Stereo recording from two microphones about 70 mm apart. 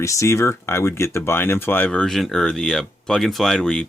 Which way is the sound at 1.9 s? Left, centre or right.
Centre.